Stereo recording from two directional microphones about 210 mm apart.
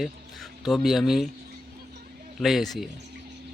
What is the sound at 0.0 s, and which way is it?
Speech, centre (ahead or behind).